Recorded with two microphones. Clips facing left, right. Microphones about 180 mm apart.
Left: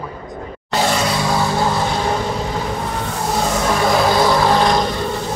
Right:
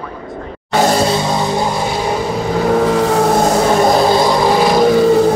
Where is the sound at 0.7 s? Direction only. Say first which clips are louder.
Right 5 dB; 45° right (ahead or behind); by 1.7 s 20° right (ahead or behind).